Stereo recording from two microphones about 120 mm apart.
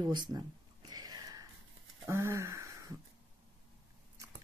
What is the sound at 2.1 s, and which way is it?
Speech, 25° right (ahead or behind).